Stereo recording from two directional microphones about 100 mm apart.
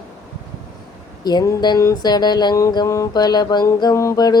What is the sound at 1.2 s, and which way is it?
Mantra, 45° left (ahead or behind).